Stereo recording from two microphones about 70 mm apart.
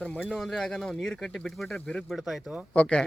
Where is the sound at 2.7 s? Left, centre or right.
Centre.